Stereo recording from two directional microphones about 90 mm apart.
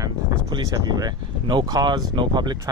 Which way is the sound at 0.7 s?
45° right (ahead or behind).